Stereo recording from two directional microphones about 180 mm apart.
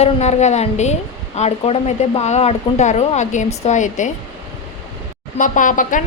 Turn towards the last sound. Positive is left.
turn(degrees=45)  # may be behind; listen again after turning